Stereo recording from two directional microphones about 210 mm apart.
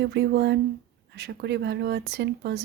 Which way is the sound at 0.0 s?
55° right (ahead or behind).